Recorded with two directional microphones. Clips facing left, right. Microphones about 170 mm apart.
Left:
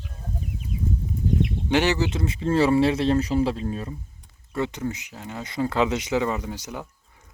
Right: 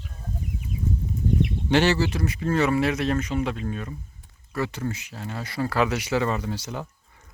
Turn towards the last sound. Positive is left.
turn(degrees=15)  # may be behind; listen again after turning